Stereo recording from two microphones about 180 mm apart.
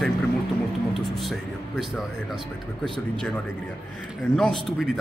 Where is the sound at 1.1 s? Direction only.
Centre (ahead or behind).